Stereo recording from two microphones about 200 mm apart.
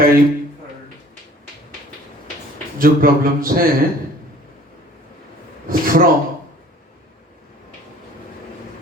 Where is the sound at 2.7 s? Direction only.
45° right (ahead or behind).